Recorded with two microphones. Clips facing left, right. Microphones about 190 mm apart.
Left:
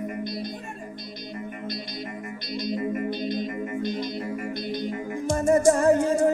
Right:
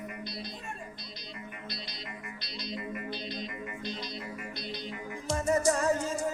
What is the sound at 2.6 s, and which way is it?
Music, 45° left (ahead or behind).